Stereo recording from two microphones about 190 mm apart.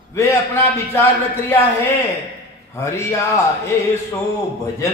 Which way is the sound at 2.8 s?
15° left (ahead or behind).